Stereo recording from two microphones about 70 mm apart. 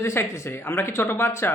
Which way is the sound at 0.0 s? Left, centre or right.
Left.